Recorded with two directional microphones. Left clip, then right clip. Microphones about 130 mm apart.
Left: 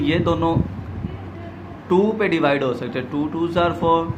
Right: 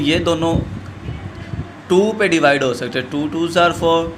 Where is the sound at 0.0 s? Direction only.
25° right (ahead or behind).